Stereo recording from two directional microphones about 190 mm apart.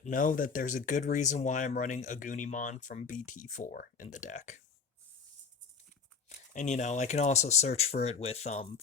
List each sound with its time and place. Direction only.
0.0 s speech: 45° left (ahead or behind)
6.2 s speech: 40° left (ahead or behind)